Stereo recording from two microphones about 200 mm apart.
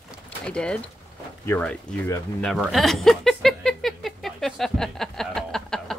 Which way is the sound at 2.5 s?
Centre (ahead or behind).